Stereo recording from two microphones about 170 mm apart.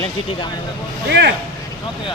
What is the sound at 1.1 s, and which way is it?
Speech, 85° right.